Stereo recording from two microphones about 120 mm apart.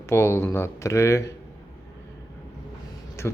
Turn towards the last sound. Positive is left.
turn(degrees=20)  # may be behind; listen again after turning